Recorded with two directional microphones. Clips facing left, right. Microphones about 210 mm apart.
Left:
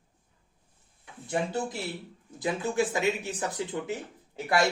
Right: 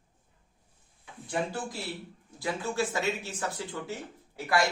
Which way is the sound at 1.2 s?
25° left (ahead or behind).